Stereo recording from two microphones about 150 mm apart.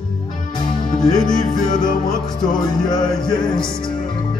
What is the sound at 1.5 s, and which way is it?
Music, 30° left (ahead or behind).